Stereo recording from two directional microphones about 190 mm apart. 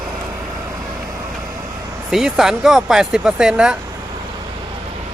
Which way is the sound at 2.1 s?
Centre (ahead or behind).